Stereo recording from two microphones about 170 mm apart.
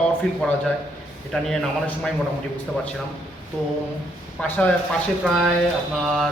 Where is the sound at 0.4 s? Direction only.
5° left (ahead or behind).